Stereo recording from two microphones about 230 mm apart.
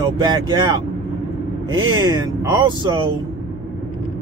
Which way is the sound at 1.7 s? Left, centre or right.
Centre.